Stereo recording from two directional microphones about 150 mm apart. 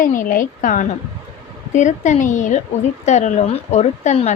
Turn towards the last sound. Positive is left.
turn(degrees=50)  # may be behind; listen again after turning